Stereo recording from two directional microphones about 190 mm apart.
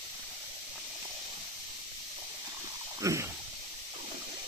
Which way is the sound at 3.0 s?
15° right (ahead or behind).